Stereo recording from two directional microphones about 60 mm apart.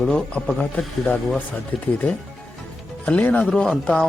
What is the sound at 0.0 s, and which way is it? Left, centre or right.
Speech, centre.